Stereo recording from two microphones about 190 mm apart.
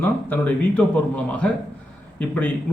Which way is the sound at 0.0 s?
10° left (ahead or behind).